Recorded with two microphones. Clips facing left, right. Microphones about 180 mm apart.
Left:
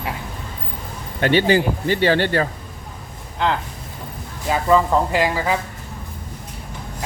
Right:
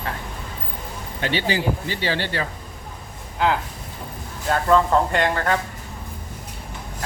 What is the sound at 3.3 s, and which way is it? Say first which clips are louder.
Speech: even; 5° right (ahead or behind).